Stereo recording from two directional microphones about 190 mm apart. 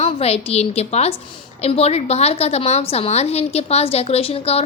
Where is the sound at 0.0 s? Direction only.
35° left (ahead or behind).